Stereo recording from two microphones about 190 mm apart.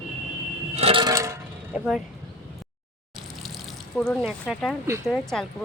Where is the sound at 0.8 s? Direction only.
30° right (ahead or behind).